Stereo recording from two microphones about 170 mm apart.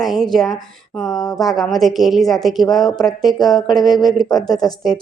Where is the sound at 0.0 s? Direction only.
Centre (ahead or behind).